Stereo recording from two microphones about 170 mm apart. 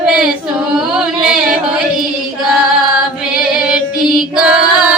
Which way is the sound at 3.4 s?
5° right (ahead or behind).